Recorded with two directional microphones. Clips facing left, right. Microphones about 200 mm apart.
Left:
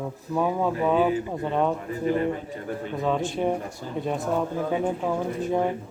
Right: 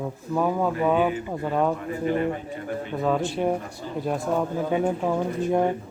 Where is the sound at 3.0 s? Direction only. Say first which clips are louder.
Right 1 dB; 5° right (ahead or behind).